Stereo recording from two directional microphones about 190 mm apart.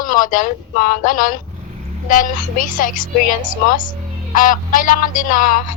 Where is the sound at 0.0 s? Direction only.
45° left (ahead or behind).